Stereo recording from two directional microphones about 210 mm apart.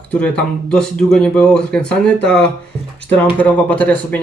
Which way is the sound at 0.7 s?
5° left (ahead or behind).